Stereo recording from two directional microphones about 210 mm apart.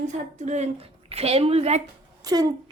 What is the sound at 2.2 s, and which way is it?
Speech, 15° right (ahead or behind).